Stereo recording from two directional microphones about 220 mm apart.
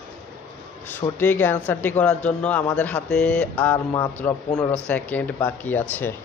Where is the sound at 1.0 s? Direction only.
20° left (ahead or behind).